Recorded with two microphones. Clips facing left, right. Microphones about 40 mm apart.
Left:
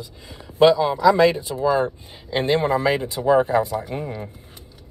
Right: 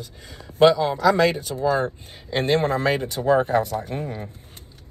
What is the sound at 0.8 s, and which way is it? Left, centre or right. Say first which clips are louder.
Speech: left 3 dB; centre.